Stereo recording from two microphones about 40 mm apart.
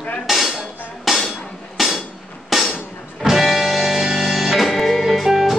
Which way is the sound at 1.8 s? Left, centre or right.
Centre.